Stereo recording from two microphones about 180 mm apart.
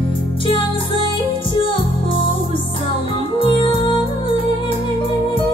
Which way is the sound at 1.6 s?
30° left (ahead or behind).